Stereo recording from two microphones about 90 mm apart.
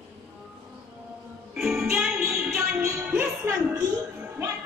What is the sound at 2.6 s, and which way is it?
Music, 25° right (ahead or behind).